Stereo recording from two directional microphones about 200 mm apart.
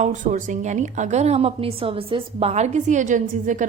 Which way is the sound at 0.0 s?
40° right (ahead or behind).